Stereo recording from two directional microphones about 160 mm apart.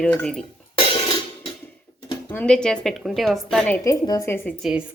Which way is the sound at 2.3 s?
5° left (ahead or behind).